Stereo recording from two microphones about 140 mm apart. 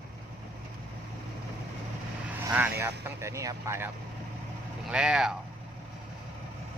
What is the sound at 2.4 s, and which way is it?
Speech, 15° right (ahead or behind).